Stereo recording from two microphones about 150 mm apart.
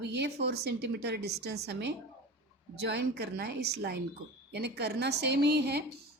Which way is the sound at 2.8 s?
90° right.